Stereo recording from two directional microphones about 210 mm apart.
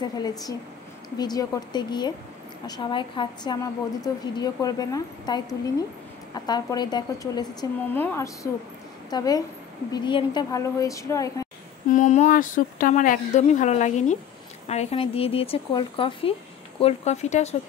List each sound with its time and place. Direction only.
0.0 s a woman's voice: 20° left (ahead or behind)
7.9 s a woman's voice: 10° left (ahead or behind)
11.9 s a woman's voice: 35° left (ahead or behind)